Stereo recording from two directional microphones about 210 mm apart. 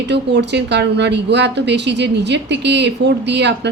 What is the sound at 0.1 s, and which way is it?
A woman's voice, 55° right (ahead or behind).